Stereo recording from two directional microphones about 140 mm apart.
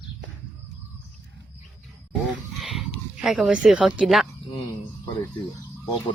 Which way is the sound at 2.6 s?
Centre (ahead or behind).